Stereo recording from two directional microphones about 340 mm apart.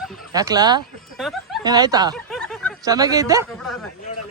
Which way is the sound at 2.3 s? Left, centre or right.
Centre.